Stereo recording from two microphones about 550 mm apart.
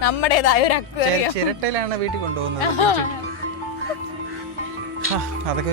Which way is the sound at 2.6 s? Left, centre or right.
Left.